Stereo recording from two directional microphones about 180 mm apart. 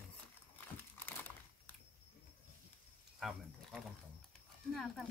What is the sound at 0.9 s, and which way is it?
Crumpling, 10° left (ahead or behind).